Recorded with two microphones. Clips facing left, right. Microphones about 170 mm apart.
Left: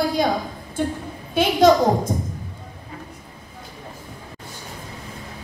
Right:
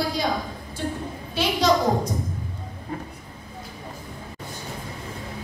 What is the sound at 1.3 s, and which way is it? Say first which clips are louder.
Speech: left 6 dB; 50° left (ahead or behind).